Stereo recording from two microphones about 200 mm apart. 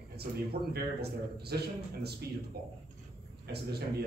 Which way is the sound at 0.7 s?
50° right (ahead or behind).